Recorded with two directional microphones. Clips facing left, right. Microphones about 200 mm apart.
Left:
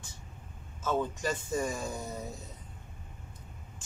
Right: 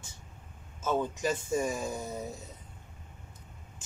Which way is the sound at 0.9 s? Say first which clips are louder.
Right 2 dB; 10° right (ahead or behind).